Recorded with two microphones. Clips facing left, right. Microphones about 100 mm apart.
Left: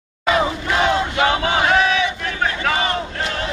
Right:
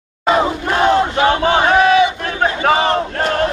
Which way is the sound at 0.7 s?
45° right (ahead or behind).